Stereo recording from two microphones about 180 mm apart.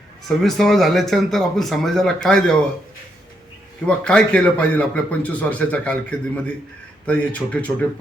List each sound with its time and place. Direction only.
0.3 s speech: centre (ahead or behind)
3.8 s a man's voice: 5° left (ahead or behind)